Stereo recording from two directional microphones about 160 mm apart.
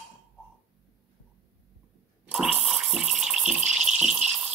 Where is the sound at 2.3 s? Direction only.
5° right (ahead or behind).